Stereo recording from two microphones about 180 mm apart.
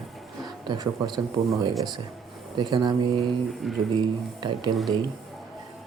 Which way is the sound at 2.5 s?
25° right (ahead or behind).